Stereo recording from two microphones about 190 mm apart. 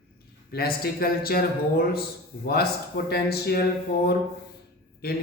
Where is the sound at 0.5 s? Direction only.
50° left (ahead or behind).